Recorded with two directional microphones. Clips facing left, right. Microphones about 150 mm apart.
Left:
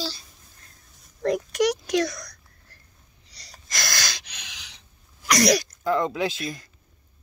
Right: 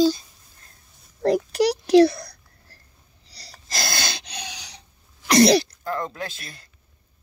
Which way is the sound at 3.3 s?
30° right (ahead or behind).